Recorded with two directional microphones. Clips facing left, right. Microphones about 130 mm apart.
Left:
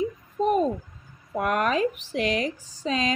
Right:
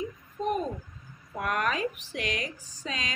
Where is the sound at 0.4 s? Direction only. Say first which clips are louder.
Left 6 dB; 35° left (ahead or behind).